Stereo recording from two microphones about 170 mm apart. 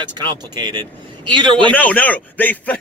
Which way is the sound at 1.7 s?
10° left (ahead or behind).